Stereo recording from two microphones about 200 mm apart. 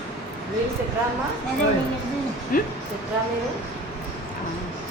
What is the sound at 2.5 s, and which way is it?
Speech, 45° left (ahead or behind).